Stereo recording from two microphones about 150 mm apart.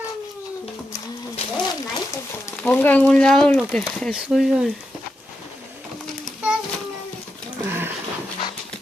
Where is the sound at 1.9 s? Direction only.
20° left (ahead or behind).